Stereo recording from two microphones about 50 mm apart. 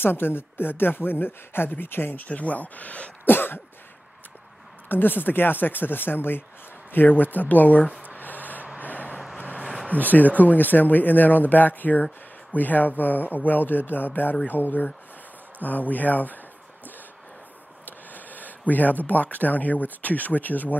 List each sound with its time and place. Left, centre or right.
0.0 s speech: left
2.2 s speech: left
3.3 s speech: left
4.8 s speech: left
8.2 s a sound: left
8.8 s vehicle: left
9.8 s speech: left
17.8 s speech: left